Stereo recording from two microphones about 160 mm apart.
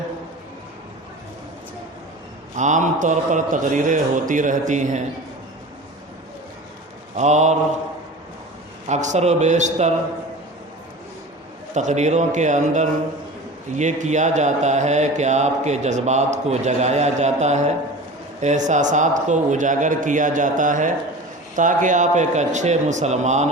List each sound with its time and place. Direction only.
2.6 s speech: 50° right (ahead or behind)
7.2 s speech: 45° right (ahead or behind)
8.9 s speech: 45° right (ahead or behind)
11.7 s speech: 45° right (ahead or behind)